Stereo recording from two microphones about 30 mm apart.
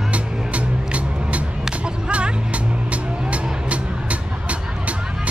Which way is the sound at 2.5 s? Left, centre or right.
Right.